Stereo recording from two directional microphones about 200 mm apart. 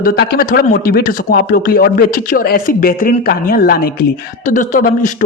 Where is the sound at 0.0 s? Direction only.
50° left (ahead or behind).